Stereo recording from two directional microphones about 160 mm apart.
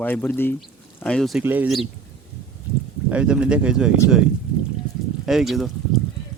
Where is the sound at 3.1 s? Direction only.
5° right (ahead or behind).